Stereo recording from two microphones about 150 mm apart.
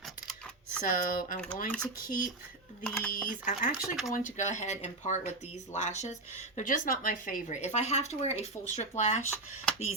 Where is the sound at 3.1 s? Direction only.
60° left (ahead or behind).